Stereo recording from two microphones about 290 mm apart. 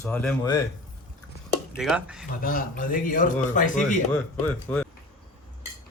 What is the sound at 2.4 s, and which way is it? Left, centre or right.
Speech, left.